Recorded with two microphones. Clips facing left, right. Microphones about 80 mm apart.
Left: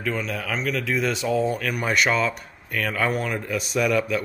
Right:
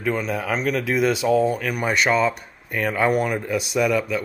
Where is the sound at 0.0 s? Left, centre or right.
Centre.